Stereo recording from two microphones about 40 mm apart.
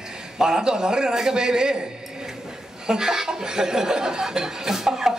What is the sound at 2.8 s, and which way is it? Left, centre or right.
A man's voice, centre.